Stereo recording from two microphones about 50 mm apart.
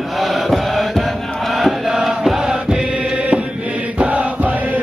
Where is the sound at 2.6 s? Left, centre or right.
Centre.